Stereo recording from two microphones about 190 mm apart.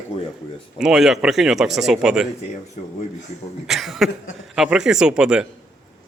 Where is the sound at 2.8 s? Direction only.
35° left (ahead or behind).